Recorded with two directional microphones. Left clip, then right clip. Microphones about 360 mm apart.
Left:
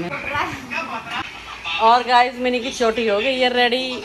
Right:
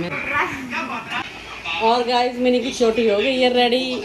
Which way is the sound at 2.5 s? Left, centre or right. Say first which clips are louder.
Right 1 dB; centre.